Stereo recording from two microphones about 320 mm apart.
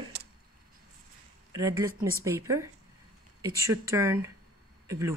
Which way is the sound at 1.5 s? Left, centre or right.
Centre.